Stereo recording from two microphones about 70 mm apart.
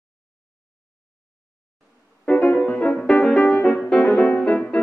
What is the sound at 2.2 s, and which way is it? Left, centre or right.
Music, centre.